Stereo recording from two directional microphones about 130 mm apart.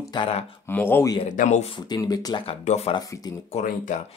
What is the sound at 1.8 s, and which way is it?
Speech, 30° left (ahead or behind).